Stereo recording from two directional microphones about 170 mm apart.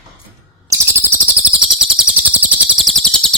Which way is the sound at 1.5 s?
5° right (ahead or behind).